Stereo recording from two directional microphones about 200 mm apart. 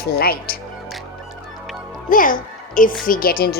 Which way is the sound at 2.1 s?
40° left (ahead or behind).